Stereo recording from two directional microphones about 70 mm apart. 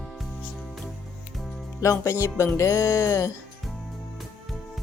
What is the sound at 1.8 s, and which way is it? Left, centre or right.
Music, left.